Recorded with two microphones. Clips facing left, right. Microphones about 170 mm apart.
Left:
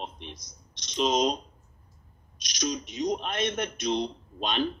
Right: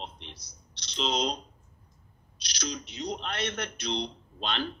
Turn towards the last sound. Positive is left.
turn(degrees=15)  # may be behind; listen again after turning